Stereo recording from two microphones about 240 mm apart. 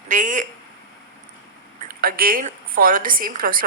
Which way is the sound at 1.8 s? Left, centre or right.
Right.